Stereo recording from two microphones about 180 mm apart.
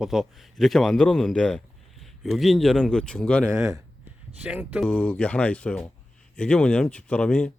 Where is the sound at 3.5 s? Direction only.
15° right (ahead or behind).